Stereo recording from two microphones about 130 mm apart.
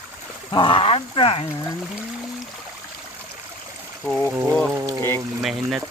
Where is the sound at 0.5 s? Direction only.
40° left (ahead or behind).